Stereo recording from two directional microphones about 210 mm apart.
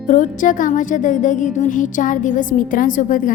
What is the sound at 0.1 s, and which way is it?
Speech, 40° left (ahead or behind).